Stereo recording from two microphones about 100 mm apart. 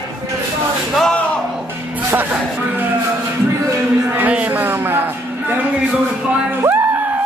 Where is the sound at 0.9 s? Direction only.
10° left (ahead or behind).